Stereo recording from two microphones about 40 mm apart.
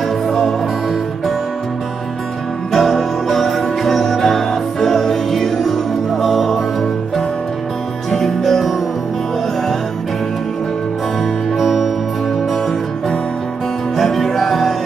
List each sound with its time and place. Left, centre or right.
0.3 s music: centre
2.7 s music: centre
11.5 s music: centre
13.9 s music: centre